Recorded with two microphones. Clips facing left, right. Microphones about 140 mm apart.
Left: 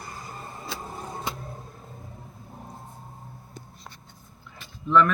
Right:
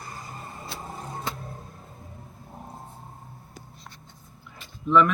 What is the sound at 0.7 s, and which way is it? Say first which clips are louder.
Vehicle: left 3 dB; 90° left.